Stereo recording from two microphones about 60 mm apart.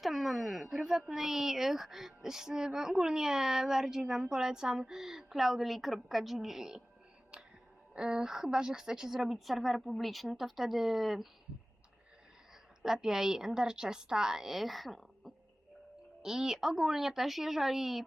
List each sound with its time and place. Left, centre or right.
0.0 s speech: centre
7.9 s a woman's voice: centre
12.8 s speech: centre
16.2 s a woman's voice: centre